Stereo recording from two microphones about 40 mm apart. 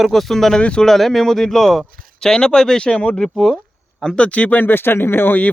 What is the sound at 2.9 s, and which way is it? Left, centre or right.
Speech, left.